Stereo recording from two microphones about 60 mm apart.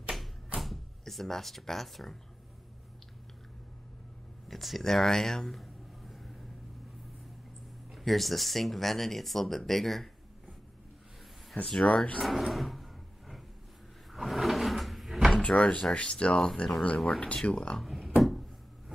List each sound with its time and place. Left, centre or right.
0.6 s speech: centre
4.5 s speech: centre
7.9 s speech: centre
11.6 s speech: centre
12.2 s speech: centre
14.1 s drawer open or close: centre
15.4 s speech: centre
17.8 s a sound: centre